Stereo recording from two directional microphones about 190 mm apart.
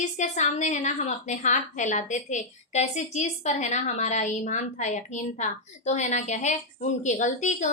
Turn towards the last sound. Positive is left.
turn(degrees=40)  # may be behind; listen again after turning